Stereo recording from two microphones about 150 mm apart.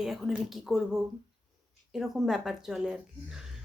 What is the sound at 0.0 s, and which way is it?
Speech, centre (ahead or behind).